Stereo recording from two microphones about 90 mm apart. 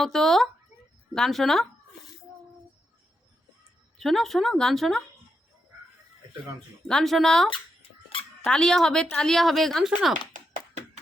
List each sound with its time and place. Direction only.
0.0 s speech: 5° left (ahead or behind)
3.9 s speech: centre (ahead or behind)
6.8 s speech: 5° left (ahead or behind)
7.5 s a sound: 90° left
8.4 s speech: 10° left (ahead or behind)